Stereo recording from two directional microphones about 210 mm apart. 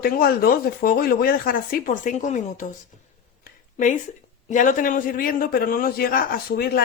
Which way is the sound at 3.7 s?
40° left (ahead or behind).